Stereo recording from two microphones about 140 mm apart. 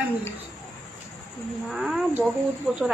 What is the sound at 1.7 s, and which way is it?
A woman's voice, centre (ahead or behind).